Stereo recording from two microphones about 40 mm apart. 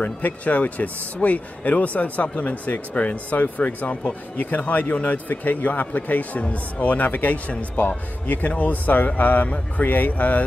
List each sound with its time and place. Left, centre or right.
0.0 s speech: left
2.2 s speech: left
2.6 s speech: left